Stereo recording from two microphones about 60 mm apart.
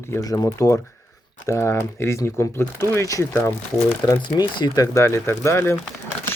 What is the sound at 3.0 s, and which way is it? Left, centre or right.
Speech, left.